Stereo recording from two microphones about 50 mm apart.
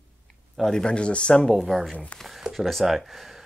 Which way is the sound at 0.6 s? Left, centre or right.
Centre.